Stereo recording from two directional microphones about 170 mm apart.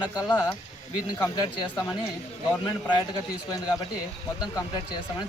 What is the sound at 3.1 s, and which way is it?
Speech, 25° left (ahead or behind).